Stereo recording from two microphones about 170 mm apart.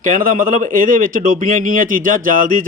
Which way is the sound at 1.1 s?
50° right (ahead or behind).